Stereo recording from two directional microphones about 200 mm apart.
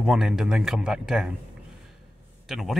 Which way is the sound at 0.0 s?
5° right (ahead or behind).